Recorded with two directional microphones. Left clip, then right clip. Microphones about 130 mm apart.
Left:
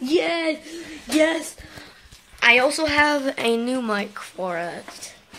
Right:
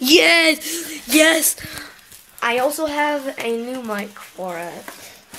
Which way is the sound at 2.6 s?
10° left (ahead or behind).